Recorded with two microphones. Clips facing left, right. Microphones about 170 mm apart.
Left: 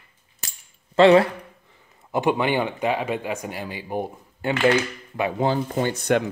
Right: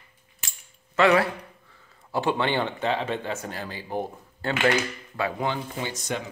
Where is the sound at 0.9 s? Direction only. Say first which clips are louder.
Left 6 dB; 30° left (ahead or behind).